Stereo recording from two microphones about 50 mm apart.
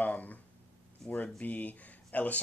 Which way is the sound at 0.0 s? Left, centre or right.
Left.